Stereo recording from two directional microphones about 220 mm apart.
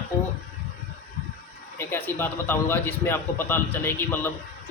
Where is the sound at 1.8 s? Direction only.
10° left (ahead or behind).